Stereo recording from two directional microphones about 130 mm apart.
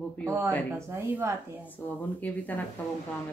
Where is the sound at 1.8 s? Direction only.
10° left (ahead or behind).